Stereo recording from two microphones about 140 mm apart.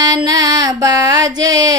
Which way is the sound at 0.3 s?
25° right (ahead or behind).